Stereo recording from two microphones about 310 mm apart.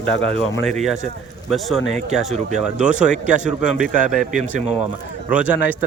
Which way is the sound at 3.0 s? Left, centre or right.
Right.